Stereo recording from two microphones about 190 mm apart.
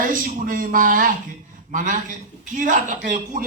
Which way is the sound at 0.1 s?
45° right (ahead or behind).